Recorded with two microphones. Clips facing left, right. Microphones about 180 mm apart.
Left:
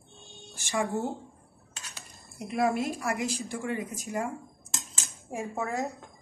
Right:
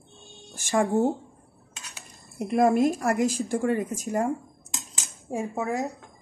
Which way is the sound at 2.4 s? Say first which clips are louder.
Right 7 dB; 45° right (ahead or behind).